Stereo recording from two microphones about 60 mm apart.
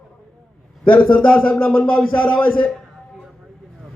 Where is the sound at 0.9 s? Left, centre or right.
Left.